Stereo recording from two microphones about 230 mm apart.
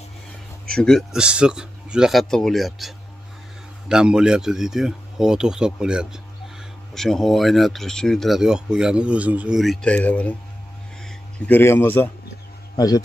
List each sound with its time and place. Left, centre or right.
0.7 s speech: centre
3.9 s speech: centre